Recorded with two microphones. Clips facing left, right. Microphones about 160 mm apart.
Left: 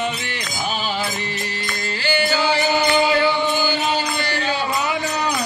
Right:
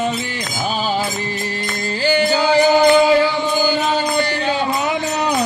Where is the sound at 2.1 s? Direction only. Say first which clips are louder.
Right 5 dB; 40° right (ahead or behind).